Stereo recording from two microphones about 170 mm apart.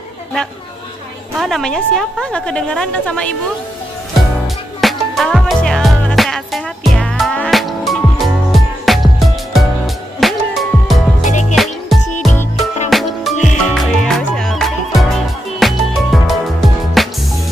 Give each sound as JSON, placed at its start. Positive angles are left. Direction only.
{"t": 1.4, "sound": "a woman's voice", "side_deg": 0}
{"t": 4.8, "sound": "music", "side_deg": 0}
{"t": 11.2, "sound": "music", "side_deg": 45}
{"t": 11.5, "sound": "music", "side_deg": 0}